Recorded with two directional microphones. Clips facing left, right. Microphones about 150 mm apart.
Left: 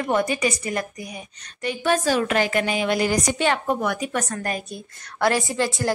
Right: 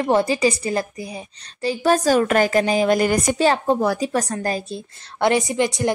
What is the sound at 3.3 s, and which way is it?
A woman's voice, 35° right (ahead or behind).